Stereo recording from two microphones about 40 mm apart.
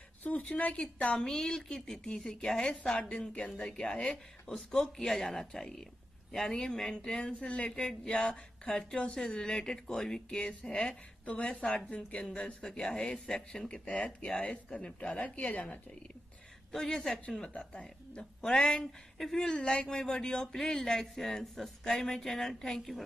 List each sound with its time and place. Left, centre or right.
0.2 s a sound: left
0.6 s a woman's voice: left
1.2 s speech: centre
3.0 s a man's voice: left
4.1 s a man's voice: centre; by 7.8 s left
7.8 s speech: centre
8.1 s a man's voice: left
10.4 s a man's voice: left
16.7 s speech: centre
18.4 s speech: centre
18.9 s speech: centre
19.3 s a man's voice: centre